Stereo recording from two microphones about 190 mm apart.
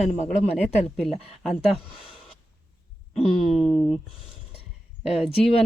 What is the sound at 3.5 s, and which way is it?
Speech, centre (ahead or behind).